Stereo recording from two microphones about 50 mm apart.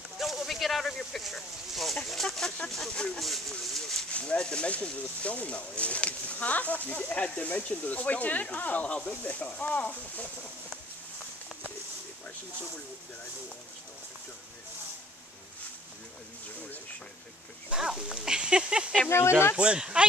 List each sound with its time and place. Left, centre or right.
0.2 s a sound: centre
2.2 s speech: centre
3.2 s speech: centre
4.1 s speech: left
17.7 s speech: centre
19.0 s speech: left
19.5 s speech: right